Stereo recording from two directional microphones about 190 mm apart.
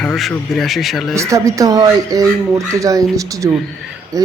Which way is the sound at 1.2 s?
15° right (ahead or behind).